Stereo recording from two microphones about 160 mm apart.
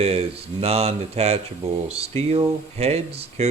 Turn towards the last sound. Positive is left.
turn(degrees=-40)  # may be behind; listen again after turning